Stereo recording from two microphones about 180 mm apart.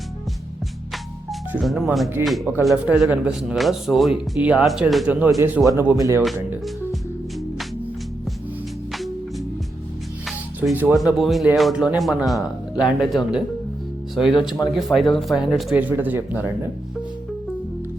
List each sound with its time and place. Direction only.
1.3 s speech: centre (ahead or behind); by 6.2 s 15° right (ahead or behind)
10.6 s speech: 10° right (ahead or behind)
14.7 s speech: centre (ahead or behind)